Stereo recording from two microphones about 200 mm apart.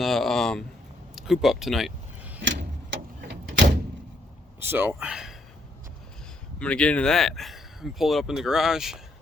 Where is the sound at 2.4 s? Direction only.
65° right (ahead or behind).